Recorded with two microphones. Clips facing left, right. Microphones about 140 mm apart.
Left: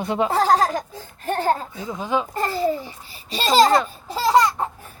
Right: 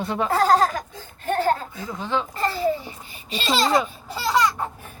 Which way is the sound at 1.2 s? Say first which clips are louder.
Right 1 dB; 35° left (ahead or behind).